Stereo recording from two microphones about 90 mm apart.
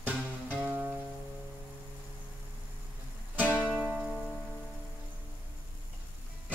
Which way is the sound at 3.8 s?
10° right (ahead or behind).